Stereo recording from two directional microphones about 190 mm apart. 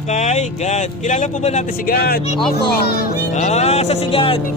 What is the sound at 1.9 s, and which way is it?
Speech, 55° left (ahead or behind).